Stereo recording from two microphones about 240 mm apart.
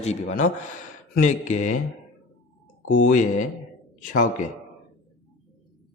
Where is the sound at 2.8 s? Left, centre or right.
Left.